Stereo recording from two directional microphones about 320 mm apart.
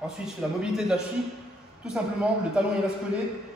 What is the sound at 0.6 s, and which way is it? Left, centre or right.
Speech, centre.